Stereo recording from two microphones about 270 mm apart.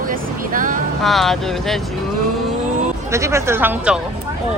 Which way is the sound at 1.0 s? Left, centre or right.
Centre.